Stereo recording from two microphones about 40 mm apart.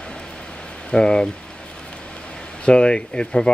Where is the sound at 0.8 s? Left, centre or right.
Left.